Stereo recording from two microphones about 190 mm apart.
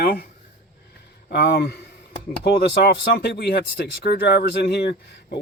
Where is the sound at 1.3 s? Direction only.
60° left (ahead or behind).